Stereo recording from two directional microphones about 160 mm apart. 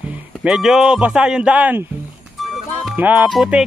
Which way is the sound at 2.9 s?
10° right (ahead or behind).